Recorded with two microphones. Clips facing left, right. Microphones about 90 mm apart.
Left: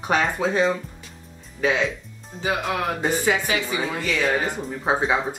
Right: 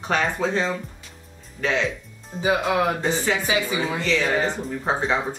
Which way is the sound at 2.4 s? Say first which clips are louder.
Right 4 dB; 15° right (ahead or behind).